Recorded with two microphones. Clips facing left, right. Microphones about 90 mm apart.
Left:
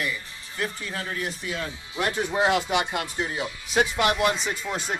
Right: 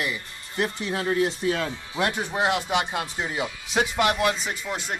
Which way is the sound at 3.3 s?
65° right (ahead or behind).